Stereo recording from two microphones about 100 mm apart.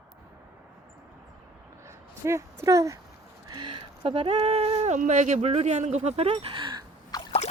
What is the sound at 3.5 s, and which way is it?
Speech, 55° right (ahead or behind).